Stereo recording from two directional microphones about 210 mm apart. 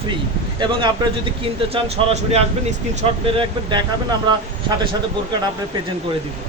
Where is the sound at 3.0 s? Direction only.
25° right (ahead or behind).